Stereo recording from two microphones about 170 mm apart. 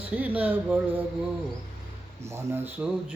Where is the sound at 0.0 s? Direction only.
10° right (ahead or behind).